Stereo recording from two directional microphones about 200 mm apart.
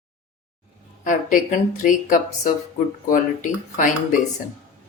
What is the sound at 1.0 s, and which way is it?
Speech, 40° left (ahead or behind).